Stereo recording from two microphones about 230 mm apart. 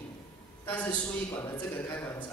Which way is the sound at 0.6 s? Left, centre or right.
Centre.